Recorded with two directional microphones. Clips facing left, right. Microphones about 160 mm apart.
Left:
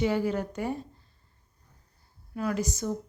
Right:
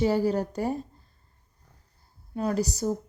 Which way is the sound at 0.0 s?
35° right (ahead or behind).